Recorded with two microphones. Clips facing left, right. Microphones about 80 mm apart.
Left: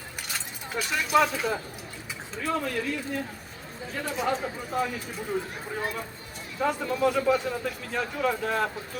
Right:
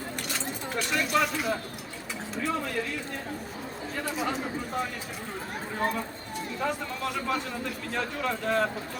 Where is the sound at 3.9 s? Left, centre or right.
Centre.